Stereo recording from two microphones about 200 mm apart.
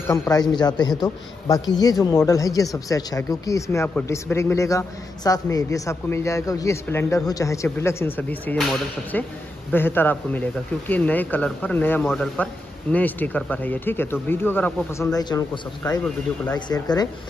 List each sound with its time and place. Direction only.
0.1 s a man's voice: 15° left (ahead or behind)